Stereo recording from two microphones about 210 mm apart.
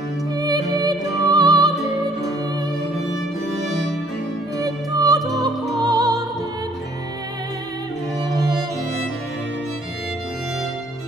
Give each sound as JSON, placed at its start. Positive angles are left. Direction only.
{"t": 0.3, "sound": "music", "side_deg": -20}
{"t": 4.6, "sound": "music", "side_deg": -20}
{"t": 8.2, "sound": "music", "side_deg": -20}